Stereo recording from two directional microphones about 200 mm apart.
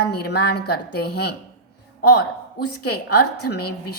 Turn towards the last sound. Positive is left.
turn(degrees=55)  # may be behind; listen again after turning